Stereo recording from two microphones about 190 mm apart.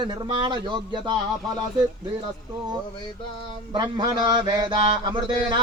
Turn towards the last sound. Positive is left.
turn(degrees=-25)  # may be behind; listen again after turning